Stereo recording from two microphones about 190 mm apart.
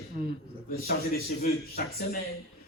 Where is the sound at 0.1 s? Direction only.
45° right (ahead or behind).